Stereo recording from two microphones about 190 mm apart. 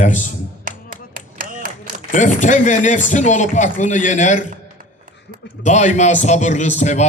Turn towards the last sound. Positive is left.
turn(degrees=40)  # may be behind; listen again after turning